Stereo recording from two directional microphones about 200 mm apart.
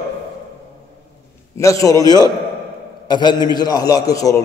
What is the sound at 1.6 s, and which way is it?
A man's voice, 15° left (ahead or behind).